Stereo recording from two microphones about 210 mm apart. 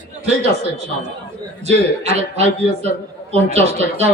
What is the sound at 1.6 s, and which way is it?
A man's voice, 30° right (ahead or behind).